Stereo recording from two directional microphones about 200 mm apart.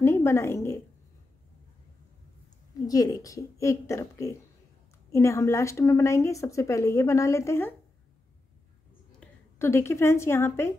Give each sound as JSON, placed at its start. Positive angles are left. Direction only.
{"t": 0.0, "sound": "a woman's voice", "side_deg": 15}
{"t": 2.9, "sound": "a woman's voice", "side_deg": 15}
{"t": 9.2, "sound": "a woman's voice", "side_deg": 10}